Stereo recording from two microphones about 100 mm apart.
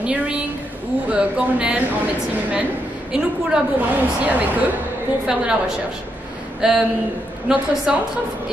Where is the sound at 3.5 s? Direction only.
10° right (ahead or behind).